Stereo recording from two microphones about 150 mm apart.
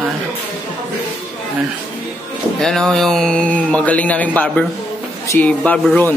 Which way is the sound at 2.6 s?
5° left (ahead or behind).